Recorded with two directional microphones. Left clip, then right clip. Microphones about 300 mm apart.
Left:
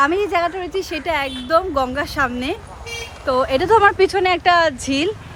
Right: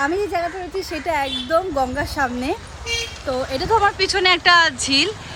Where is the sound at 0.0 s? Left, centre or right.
Centre.